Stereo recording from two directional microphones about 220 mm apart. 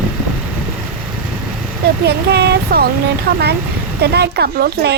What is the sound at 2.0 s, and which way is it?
Speech, 50° right (ahead or behind).